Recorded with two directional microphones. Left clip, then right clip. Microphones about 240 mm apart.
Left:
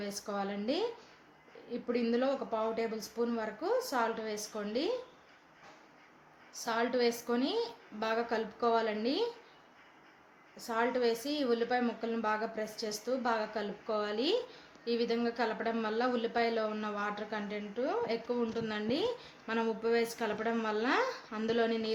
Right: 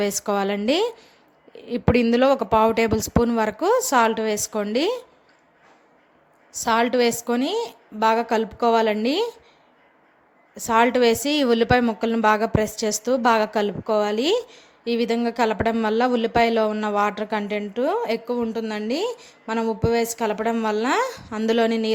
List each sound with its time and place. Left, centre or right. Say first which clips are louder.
0.0 s speech: right 15 dB; right
6.5 s speech: right 13 dB; right
10.7 s speech: right 14 dB; right